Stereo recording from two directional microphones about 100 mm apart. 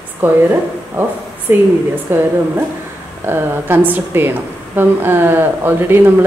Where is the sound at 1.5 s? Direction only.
20° right (ahead or behind).